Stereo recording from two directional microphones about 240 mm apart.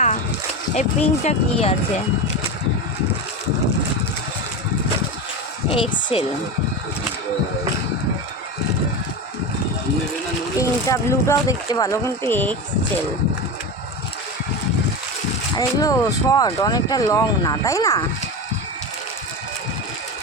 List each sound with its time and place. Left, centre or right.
0.8 s speech: left
5.7 s speech: left
10.6 s speech: centre
15.5 s speech: centre